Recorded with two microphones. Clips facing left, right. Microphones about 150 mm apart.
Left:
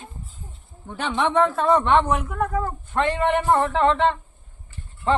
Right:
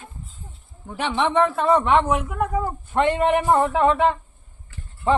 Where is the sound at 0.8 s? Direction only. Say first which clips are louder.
Right 1 dB; 5° right (ahead or behind).